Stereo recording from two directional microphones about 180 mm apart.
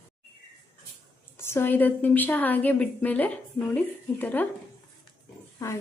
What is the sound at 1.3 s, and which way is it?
A woman's voice, 15° left (ahead or behind).